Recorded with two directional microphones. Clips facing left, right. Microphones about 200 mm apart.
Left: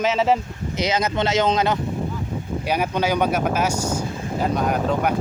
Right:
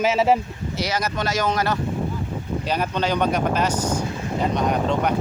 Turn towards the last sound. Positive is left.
turn(degrees=5)  # may be behind; listen again after turning